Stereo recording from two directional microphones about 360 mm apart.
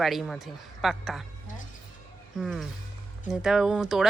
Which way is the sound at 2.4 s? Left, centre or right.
Centre.